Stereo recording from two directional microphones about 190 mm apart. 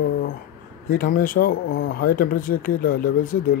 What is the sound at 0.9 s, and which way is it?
Speech, 50° left (ahead or behind).